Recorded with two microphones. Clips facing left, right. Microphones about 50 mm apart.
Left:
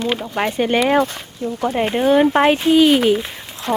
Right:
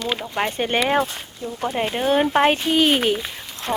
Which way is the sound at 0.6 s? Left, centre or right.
Left.